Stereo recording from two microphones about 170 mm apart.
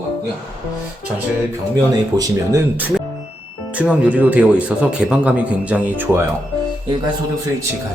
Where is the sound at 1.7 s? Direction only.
20° right (ahead or behind).